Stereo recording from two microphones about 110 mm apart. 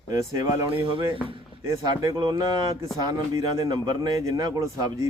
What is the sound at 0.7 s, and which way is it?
Speech, 55° right (ahead or behind).